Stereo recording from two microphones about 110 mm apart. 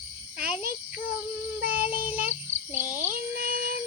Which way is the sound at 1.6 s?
15° right (ahead or behind).